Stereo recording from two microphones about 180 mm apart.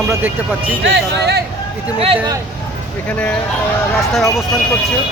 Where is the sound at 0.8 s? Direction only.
75° right (ahead or behind).